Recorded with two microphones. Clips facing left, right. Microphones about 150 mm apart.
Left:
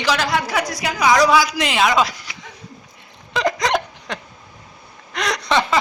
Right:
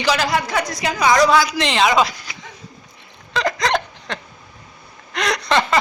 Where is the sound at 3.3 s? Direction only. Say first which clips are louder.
Even; 15° left (ahead or behind).